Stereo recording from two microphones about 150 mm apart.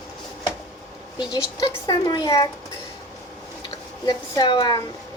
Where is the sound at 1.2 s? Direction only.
25° left (ahead or behind).